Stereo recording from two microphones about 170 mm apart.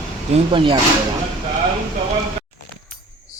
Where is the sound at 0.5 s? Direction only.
30° right (ahead or behind).